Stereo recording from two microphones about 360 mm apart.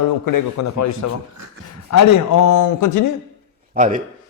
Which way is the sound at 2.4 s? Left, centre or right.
Left.